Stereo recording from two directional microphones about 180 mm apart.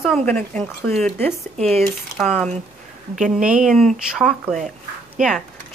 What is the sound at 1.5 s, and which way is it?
Speech, 35° right (ahead or behind).